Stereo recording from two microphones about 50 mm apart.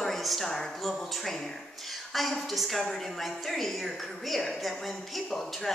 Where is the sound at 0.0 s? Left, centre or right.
Centre.